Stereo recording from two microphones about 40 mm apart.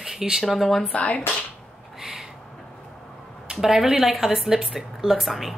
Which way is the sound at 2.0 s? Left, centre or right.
Centre.